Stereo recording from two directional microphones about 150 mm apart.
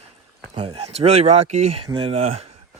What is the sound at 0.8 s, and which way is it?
Speech, 45° right (ahead or behind).